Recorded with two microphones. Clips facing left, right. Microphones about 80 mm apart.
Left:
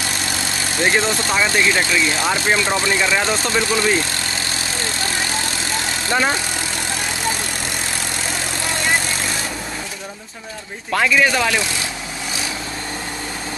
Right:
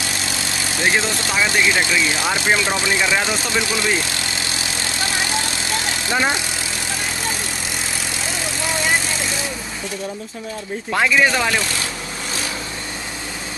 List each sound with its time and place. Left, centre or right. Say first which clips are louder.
0.7 s speech: left 2 dB; centre
6.0 s speech: left 1 dB; centre
10.9 s speech: even; centre